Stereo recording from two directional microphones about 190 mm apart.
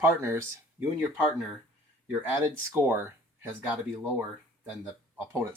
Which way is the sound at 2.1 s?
10° right (ahead or behind).